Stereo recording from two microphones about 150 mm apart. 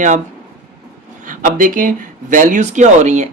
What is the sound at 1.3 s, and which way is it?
Speech, 65° right (ahead or behind).